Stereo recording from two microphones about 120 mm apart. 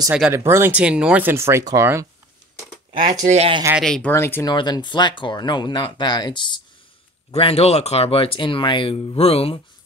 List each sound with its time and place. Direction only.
0.3 s speech: 20° right (ahead or behind)
3.0 s speech: 85° right
3.8 s speech: 5° left (ahead or behind)
4.1 s speech: 20° left (ahead or behind)
4.5 s speech: 35° left (ahead or behind)
7.2 s speech: 55° left (ahead or behind)